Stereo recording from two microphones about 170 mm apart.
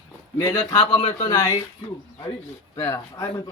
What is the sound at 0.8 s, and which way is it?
Speech, 35° left (ahead or behind).